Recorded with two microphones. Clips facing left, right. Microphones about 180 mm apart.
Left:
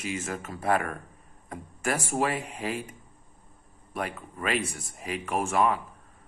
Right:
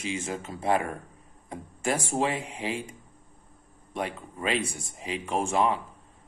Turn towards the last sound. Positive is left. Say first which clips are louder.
# even
turn(degrees=-30)  # may be behind; listen again after turning